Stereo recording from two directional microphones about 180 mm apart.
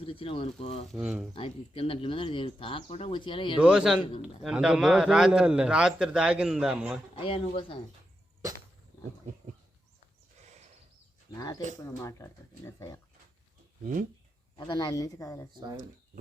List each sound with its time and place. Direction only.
0.0 s speech: 30° left (ahead or behind)
0.9 s a man's voice: 5° right (ahead or behind)
1.4 s speech: 35° left (ahead or behind)
3.6 s a man's voice: 5° right (ahead or behind)
7.2 s speech: 30° left (ahead or behind)
10.4 s horse: 40° right (ahead or behind)
11.8 s speech: 15° left (ahead or behind)
13.8 s speech: 45° right (ahead or behind)
14.7 s speech: 20° left (ahead or behind)